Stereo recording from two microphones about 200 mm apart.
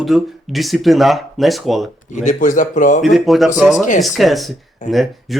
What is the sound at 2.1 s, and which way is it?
Speech, 40° left (ahead or behind).